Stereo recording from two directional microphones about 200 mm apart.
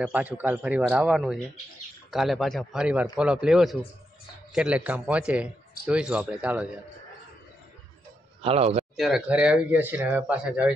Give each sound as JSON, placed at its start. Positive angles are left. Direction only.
{"t": 0.0, "sound": "a man's voice", "side_deg": -5}
{"t": 8.4, "sound": "speech", "side_deg": -30}
{"t": 8.9, "sound": "a man's voice", "side_deg": 0}